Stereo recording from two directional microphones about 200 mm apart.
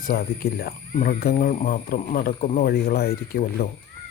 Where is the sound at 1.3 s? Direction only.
35° left (ahead or behind).